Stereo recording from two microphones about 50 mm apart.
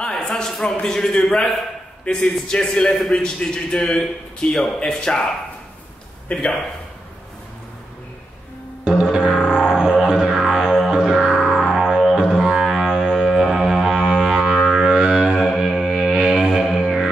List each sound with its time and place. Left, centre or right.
0.0 s a man's voice: centre
8.8 s music: centre
15.3 s music: centre